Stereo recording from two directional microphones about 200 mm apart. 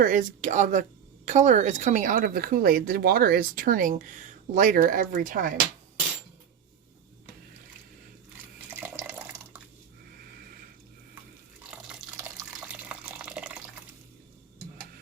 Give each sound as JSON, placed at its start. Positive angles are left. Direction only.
{"t": 0.0, "sound": "a woman's voice", "side_deg": -40}
{"t": 8.7, "sound": "water", "side_deg": -10}
{"t": 11.6, "sound": "drip", "side_deg": -5}
{"t": 12.1, "sound": "water", "side_deg": -5}